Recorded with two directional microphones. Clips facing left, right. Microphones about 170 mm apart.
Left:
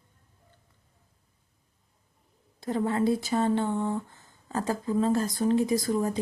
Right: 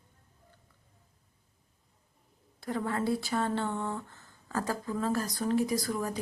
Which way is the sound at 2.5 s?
20° left (ahead or behind).